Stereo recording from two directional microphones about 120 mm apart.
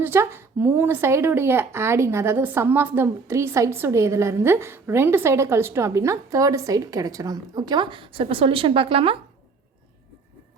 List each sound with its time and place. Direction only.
0.0 s speech: 20° right (ahead or behind); by 9.1 s 50° right (ahead or behind)